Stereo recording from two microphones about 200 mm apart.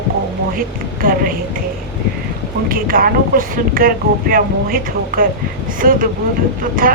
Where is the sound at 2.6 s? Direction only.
45° right (ahead or behind).